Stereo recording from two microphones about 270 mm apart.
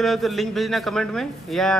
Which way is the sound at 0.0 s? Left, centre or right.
Centre.